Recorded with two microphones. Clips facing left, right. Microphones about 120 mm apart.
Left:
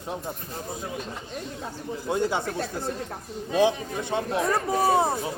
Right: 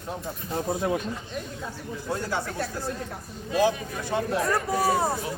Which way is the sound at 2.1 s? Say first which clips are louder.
Left 5 dB; 20° left (ahead or behind).